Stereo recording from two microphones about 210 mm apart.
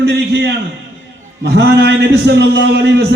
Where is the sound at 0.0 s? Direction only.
50° right (ahead or behind).